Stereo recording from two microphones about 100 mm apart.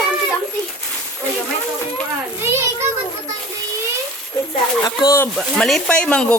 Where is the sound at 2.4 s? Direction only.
25° right (ahead or behind).